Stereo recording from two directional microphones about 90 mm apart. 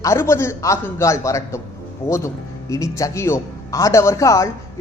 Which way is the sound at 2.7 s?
35° left (ahead or behind).